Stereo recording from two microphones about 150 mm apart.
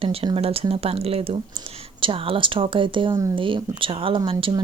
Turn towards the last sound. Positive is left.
turn(degrees=-35)  # may be behind; listen again after turning